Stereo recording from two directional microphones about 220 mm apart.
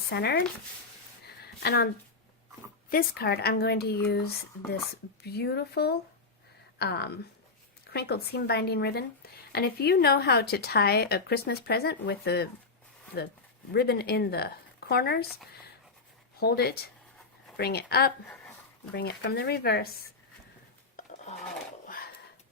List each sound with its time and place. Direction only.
0.1 s a woman's voice: 50° left (ahead or behind)
1.6 s a woman's voice: 45° left (ahead or behind)
2.9 s a woman's voice: 40° left (ahead or behind)
13.7 s a woman's voice: 45° left (ahead or behind)
16.4 s a woman's voice: 45° left (ahead or behind)
20.9 s dishes: 35° left (ahead or behind)
21.8 s a sound: 40° left (ahead or behind)